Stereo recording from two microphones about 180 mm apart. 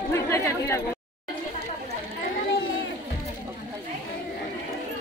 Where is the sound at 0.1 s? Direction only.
15° left (ahead or behind).